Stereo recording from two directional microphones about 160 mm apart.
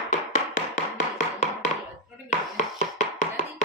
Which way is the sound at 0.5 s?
50° left (ahead or behind).